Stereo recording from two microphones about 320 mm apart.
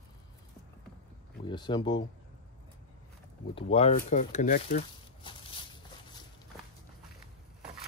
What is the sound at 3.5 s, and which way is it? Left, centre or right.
Speech, centre.